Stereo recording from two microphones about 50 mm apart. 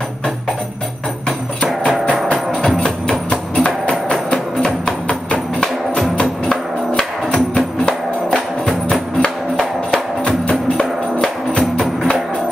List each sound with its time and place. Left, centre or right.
2.8 s music: centre
7.0 s music: centre
10.8 s music: centre